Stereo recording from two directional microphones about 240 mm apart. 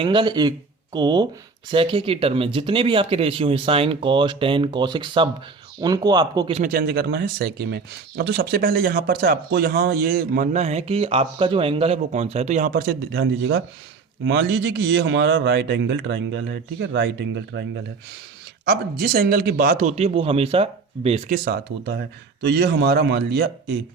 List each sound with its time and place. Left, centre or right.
0.0 s speech: right
6.6 s a man's voice: right